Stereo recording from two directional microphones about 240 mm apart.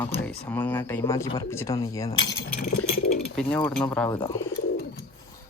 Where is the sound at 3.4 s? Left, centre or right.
Centre.